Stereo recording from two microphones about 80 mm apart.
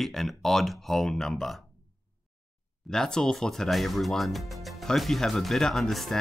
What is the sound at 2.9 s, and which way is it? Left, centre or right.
Speech, centre.